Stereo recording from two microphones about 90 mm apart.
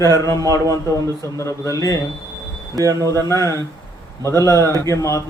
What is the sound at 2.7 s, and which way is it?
Speech, 40° right (ahead or behind).